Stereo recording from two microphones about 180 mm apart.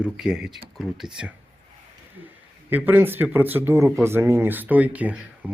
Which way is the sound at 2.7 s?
10° right (ahead or behind).